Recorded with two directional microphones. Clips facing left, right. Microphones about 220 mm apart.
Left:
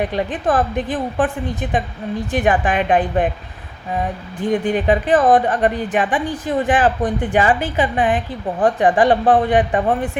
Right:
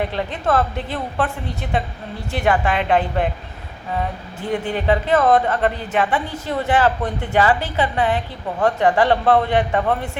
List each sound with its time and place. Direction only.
0.0 s a woman's voice: 15° left (ahead or behind)
4.4 s a woman's voice: 20° left (ahead or behind)